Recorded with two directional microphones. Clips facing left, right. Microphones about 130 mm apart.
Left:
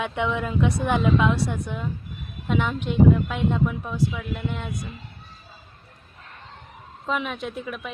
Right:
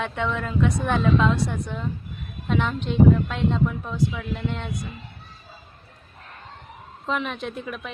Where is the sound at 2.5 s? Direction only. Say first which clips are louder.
Even; 10° left (ahead or behind).